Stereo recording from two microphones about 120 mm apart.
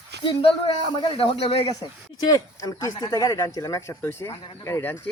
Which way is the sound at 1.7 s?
35° left (ahead or behind).